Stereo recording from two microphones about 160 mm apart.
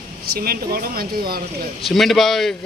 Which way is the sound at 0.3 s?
70° right (ahead or behind).